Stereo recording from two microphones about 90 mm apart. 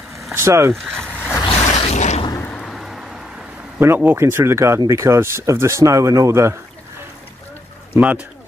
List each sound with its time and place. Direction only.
0.3 s speech: 30° right (ahead or behind)
1.4 s a sound: 65° left (ahead or behind)
2.4 s a sound: 10° left (ahead or behind)
2.7 s vehicle: centre (ahead or behind)
3.8 s speech: 25° right (ahead or behind)
7.9 s speech: 15° right (ahead or behind)